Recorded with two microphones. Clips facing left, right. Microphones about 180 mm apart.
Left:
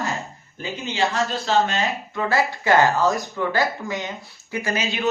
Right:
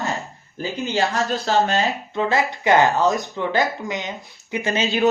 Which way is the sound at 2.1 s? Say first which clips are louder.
Even; 20° right (ahead or behind).